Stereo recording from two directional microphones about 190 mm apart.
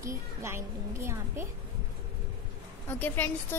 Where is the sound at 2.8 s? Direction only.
10° left (ahead or behind).